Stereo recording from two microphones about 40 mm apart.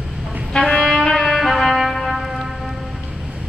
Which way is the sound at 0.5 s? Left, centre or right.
Centre.